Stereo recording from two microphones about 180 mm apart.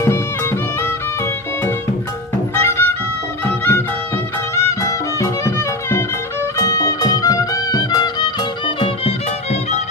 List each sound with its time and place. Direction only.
2.6 s music: 15° left (ahead or behind); by 9.8 s 35° left (ahead or behind)